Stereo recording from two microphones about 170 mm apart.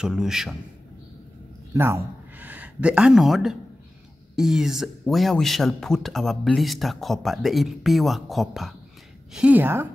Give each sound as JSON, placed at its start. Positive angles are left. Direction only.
{"t": 0.0, "sound": "speech", "side_deg": -5}
{"t": 1.7, "sound": "a woman's voice", "side_deg": -15}